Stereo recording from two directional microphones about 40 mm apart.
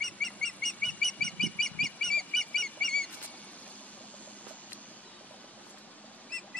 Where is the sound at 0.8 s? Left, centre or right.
Left.